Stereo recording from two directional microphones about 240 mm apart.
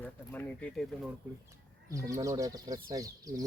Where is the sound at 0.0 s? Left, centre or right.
Centre.